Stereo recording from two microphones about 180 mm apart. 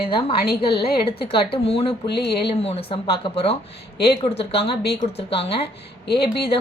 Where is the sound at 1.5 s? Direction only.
35° left (ahead or behind).